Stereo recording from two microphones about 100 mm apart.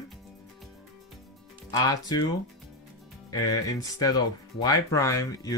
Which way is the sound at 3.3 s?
35° left (ahead or behind).